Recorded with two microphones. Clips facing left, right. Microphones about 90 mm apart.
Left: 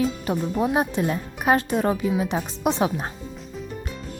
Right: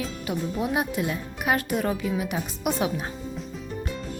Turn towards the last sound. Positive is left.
turn(degrees=35)  # may be behind; listen again after turning